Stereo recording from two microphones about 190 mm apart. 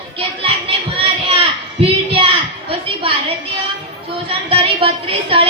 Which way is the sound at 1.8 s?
30° right (ahead or behind).